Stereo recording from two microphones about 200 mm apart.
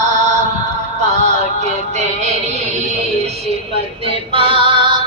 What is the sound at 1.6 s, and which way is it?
Music, 35° right (ahead or behind).